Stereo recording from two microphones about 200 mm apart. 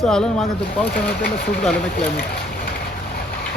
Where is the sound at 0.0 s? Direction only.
Centre (ahead or behind).